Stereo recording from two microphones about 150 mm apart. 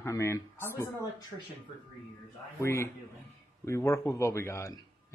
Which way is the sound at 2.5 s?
15° left (ahead or behind).